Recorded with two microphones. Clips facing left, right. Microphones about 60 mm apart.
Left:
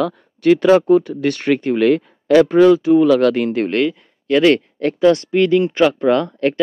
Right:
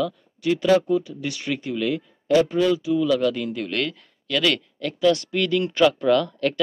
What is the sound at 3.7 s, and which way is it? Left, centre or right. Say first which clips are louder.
Speech: left 9 dB; left.